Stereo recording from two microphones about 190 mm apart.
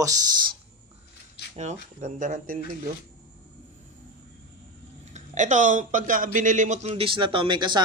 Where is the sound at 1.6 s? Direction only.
40° right (ahead or behind).